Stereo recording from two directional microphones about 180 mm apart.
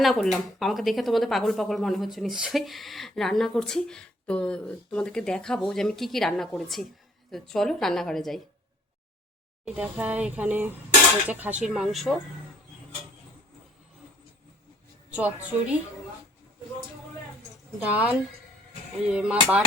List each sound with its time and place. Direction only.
0.0 s speech: centre (ahead or behind)
9.6 s speech: 5° right (ahead or behind)
15.1 s speech: 10° right (ahead or behind)
17.7 s speech: 5° right (ahead or behind)